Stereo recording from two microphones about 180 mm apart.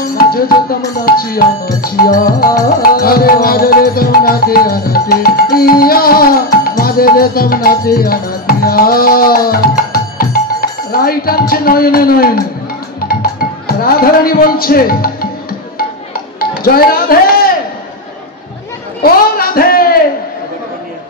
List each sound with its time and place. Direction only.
0.2 s music: 55° left (ahead or behind)
16.1 s chop: 55° left (ahead or behind)
19.0 s a sound: 55° left (ahead or behind)